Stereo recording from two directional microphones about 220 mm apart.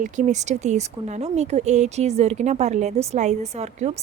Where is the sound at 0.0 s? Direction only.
35° right (ahead or behind).